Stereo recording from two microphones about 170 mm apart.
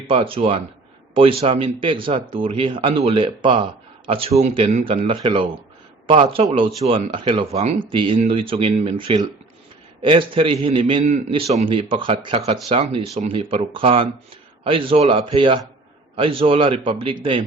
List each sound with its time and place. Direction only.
0.1 s speech: 35° right (ahead or behind)